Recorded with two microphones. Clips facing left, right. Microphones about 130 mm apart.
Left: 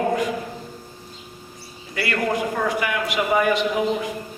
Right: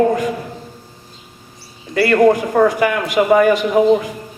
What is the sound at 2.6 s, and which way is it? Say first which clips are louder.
A man's voice: right 8 dB; 45° right (ahead or behind).